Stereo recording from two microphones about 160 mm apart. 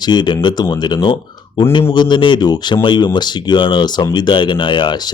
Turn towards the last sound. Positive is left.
turn(degrees=30)  # may be behind; listen again after turning